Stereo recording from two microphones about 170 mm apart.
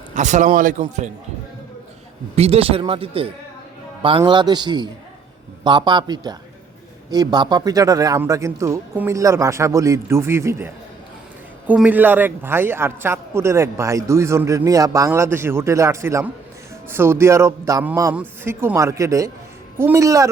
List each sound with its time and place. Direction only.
0.1 s a man's voice: 45° right (ahead or behind)
2.3 s a man's voice: 35° right (ahead or behind); by 10.7 s 15° right (ahead or behind)
11.7 s a man's voice: 10° right (ahead or behind)